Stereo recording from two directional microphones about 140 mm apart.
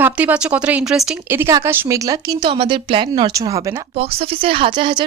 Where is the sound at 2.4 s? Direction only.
35° right (ahead or behind).